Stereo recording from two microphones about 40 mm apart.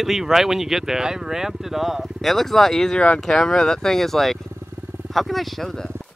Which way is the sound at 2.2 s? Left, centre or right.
Centre.